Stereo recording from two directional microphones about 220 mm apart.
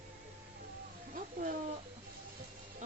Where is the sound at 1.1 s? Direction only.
40° right (ahead or behind).